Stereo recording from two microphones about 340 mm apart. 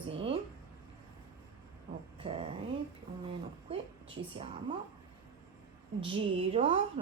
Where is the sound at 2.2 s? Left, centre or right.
Centre.